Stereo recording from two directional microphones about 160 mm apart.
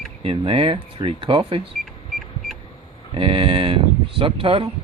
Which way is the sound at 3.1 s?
35° right (ahead or behind).